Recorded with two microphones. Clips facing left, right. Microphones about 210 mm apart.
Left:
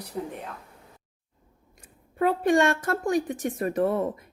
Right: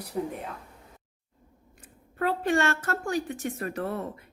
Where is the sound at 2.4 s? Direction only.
15° left (ahead or behind).